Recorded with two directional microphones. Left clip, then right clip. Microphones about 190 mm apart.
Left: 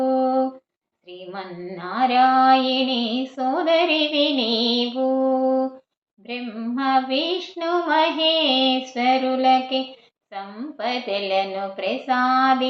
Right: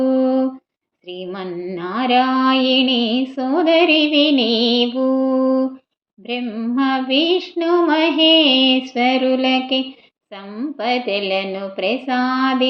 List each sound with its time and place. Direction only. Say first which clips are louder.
0.0 s humming: right 3 dB; 45° right (ahead or behind)
1.3 s female singing: right 5 dB; 40° right (ahead or behind)